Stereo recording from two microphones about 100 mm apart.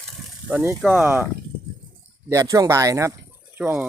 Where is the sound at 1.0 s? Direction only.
20° right (ahead or behind).